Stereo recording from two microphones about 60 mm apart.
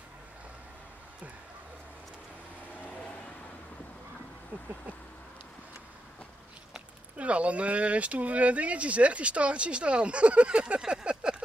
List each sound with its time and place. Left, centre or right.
6.7 s speech: right